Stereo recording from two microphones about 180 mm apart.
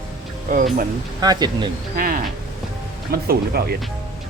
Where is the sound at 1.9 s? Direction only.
50° right (ahead or behind).